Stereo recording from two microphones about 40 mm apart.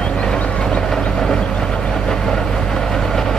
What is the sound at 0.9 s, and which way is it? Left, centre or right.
Vehicle, centre.